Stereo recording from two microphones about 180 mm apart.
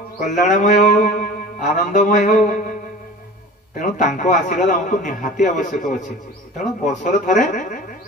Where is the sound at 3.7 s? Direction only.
45° left (ahead or behind).